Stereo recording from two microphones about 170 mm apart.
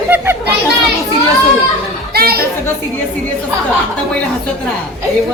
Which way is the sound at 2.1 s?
65° right (ahead or behind).